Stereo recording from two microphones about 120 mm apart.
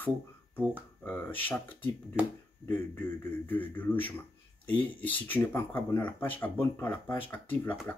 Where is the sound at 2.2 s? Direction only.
10° right (ahead or behind).